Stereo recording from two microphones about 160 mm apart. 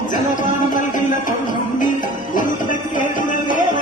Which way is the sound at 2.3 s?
55° left (ahead or behind).